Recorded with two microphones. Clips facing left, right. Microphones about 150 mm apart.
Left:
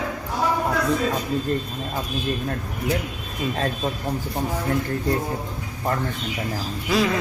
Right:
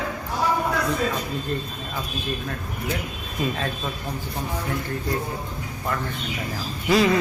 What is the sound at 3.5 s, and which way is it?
Speech, 40° left (ahead or behind).